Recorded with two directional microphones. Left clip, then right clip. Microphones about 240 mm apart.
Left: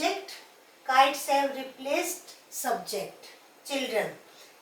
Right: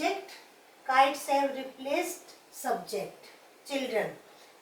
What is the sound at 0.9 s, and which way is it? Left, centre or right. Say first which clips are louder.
A woman's voice: left 2 dB; centre.